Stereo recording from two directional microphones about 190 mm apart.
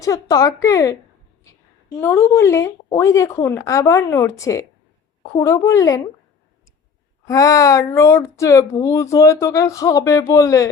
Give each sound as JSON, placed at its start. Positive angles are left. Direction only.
{"t": 0.0, "sound": "speech", "side_deg": 15}
{"t": 2.0, "sound": "speech", "side_deg": 10}
{"t": 7.3, "sound": "speech", "side_deg": 15}